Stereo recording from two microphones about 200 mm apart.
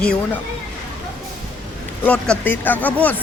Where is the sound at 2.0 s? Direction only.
5° left (ahead or behind).